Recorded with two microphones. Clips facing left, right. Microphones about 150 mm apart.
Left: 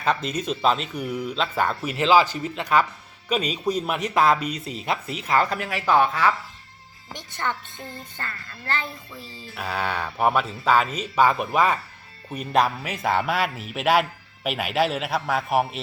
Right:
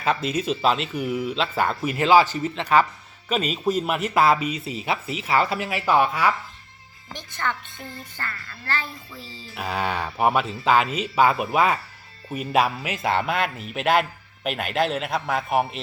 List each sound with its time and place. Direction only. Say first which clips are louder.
0.0 s speech: right 1 dB; 5° right (ahead or behind)
3.2 s speech: right 1 dB; 5° right (ahead or behind)
7.1 s a child's voice: even; 20° left (ahead or behind)
9.6 s speech: right 1 dB; 10° right (ahead or behind)